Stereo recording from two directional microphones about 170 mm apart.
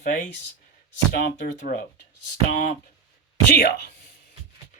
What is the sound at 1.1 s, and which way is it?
Speech, 65° left (ahead or behind).